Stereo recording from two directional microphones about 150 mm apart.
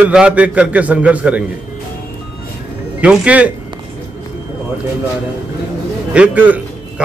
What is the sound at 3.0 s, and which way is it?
Speech, 10° right (ahead or behind).